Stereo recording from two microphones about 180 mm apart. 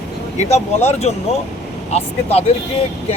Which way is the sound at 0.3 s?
40° left (ahead or behind).